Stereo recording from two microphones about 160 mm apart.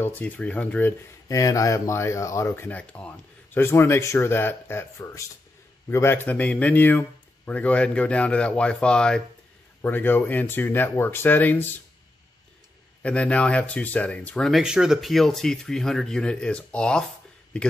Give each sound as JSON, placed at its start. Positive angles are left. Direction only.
{"t": 0.0, "sound": "speech", "side_deg": 10}
{"t": 1.4, "sound": "speech", "side_deg": 20}
{"t": 13.0, "sound": "speech", "side_deg": 5}